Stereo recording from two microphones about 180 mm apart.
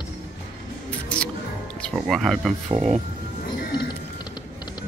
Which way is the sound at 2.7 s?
35° right (ahead or behind).